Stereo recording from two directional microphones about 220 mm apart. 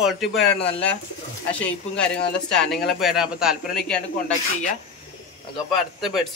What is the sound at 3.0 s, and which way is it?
A man's voice, centre (ahead or behind).